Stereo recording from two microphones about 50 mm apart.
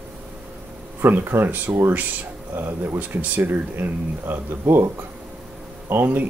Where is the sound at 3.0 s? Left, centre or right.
Right.